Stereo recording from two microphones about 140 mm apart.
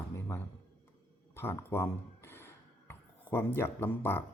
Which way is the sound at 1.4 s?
15° left (ahead or behind).